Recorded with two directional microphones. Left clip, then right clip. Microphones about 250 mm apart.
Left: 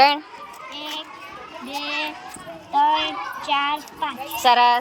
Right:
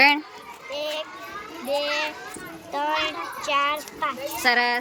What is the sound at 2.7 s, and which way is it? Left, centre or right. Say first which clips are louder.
A child's voice: left 6 dB; centre.